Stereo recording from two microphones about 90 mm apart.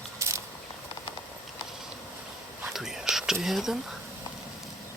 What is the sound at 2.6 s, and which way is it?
Whispering, 5° right (ahead or behind).